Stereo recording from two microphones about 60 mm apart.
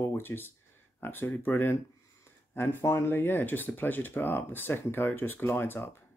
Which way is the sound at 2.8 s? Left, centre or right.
Left.